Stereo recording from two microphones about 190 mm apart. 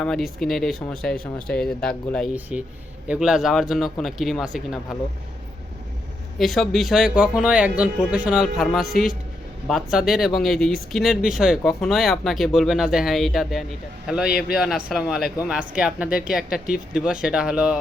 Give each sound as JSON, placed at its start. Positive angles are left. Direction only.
{"t": 0.0, "sound": "speech", "side_deg": 0}
{"t": 6.4, "sound": "speech", "side_deg": 0}